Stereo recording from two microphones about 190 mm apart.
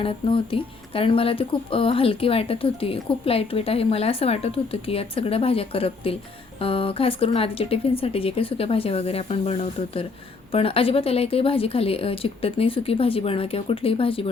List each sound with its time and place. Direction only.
0.0 s speech: 25° left (ahead or behind)